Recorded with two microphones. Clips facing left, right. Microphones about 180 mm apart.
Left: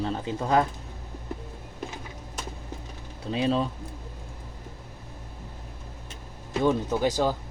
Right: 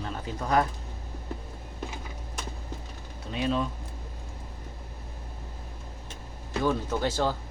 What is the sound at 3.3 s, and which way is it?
Speech, 30° left (ahead or behind).